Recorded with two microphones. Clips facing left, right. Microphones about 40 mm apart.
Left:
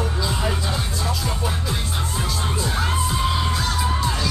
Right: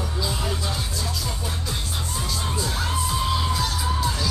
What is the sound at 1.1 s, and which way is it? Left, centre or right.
Music, left.